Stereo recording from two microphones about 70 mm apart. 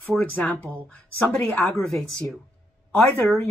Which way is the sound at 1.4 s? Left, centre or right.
Centre.